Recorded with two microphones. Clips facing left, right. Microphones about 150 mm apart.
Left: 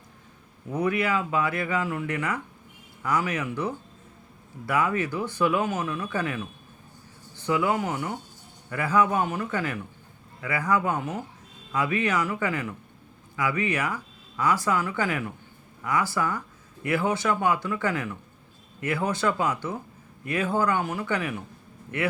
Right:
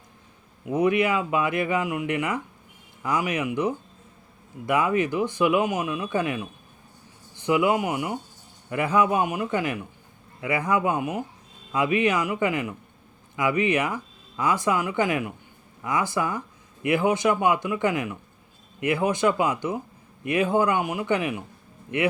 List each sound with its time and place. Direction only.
0.6 s speech: 20° right (ahead or behind)